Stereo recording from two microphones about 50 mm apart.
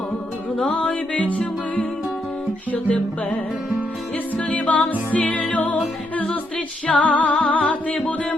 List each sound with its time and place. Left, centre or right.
0.6 s music: left
4.5 s music: left